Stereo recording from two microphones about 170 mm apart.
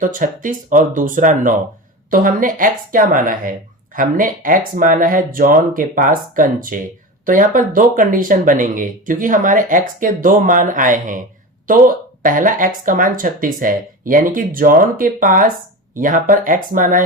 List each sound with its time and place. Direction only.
0.0 s speech: 50° right (ahead or behind)